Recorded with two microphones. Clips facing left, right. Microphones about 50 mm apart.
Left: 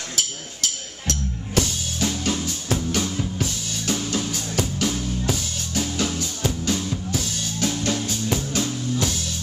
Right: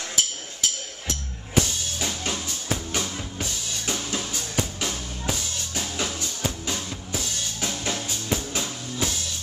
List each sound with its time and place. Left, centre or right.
0.1 s music: centre